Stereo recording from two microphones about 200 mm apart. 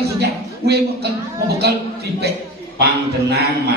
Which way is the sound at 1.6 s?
55° right (ahead or behind).